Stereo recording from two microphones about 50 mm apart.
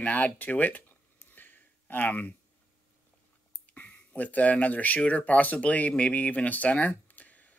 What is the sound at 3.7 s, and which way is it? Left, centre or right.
Speech, left.